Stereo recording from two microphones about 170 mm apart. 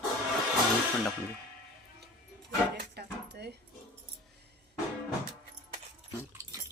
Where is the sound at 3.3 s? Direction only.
75° right (ahead or behind).